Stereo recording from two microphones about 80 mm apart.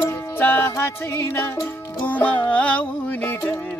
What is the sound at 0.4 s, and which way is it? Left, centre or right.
Music, left.